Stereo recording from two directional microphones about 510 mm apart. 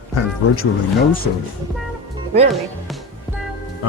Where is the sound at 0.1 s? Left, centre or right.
Left.